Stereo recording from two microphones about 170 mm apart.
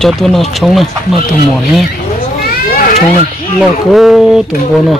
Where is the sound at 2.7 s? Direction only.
55° left (ahead or behind).